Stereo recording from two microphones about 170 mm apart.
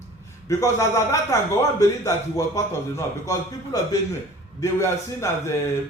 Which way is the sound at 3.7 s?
20° left (ahead or behind).